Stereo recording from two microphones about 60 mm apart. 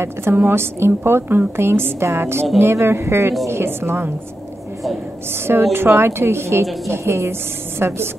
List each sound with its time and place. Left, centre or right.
0.0 s a woman's voice: right
5.5 s a woman's voice: right